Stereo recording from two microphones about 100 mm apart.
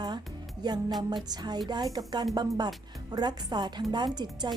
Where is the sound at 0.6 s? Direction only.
45° right (ahead or behind).